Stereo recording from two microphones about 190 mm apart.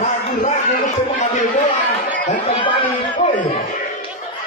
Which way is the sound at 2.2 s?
35° left (ahead or behind).